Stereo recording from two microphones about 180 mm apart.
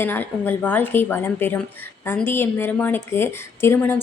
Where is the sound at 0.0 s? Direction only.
10° left (ahead or behind).